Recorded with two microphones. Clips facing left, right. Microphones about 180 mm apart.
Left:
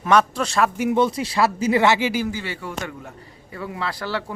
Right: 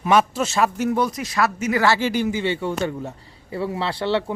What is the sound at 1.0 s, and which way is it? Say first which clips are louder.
Speech: left 5 dB; 30° left (ahead or behind).